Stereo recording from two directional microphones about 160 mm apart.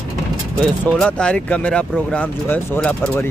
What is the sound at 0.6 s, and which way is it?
Speech, 5° left (ahead or behind).